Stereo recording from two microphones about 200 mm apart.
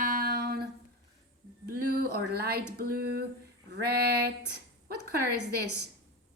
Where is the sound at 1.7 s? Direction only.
50° right (ahead or behind).